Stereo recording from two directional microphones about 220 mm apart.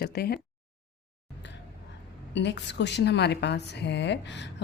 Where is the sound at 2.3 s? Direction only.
55° left (ahead or behind).